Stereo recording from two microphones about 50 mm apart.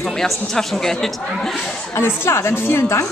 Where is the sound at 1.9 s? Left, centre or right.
Left.